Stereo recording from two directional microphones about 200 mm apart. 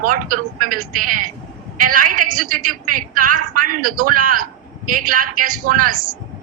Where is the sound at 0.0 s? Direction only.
45° right (ahead or behind).